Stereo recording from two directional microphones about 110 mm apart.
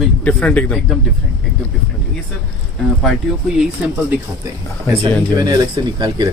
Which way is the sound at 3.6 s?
10° right (ahead or behind).